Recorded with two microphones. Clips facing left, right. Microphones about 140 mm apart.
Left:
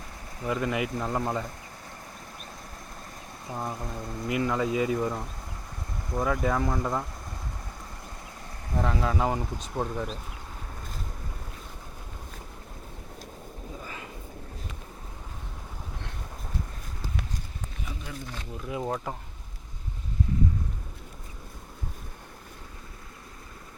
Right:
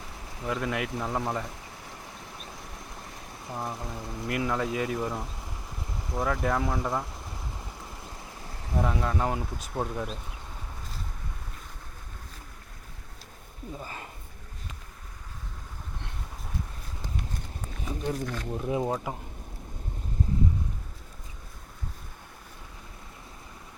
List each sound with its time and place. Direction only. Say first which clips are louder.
0.3 s speech: left 2 dB; centre (ahead or behind)
3.4 s speech: left 1 dB; centre (ahead or behind)
8.7 s speech: left 1 dB; centre (ahead or behind)
17.8 s wild animals: right 10 dB; 35° right (ahead or behind)
18.5 s speech: right 5 dB; 30° right (ahead or behind)
18.8 s speech: right 2 dB; 10° right (ahead or behind)